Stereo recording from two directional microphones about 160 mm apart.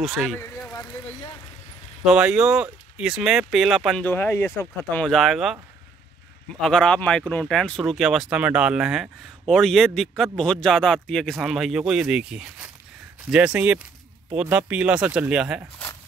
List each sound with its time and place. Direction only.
0.0 s speech: centre (ahead or behind)
0.7 s a sound: 20° left (ahead or behind)
2.0 s speech: 5° right (ahead or behind)
4.0 s speech: 15° left (ahead or behind)
5.0 s speech: centre (ahead or behind)
6.6 s speech: 5° left (ahead or behind)